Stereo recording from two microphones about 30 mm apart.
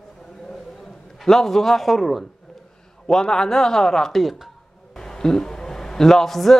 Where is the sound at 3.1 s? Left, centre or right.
Left.